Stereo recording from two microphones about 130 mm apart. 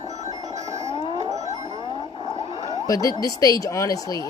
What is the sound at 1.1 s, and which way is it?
Music, 60° right (ahead or behind).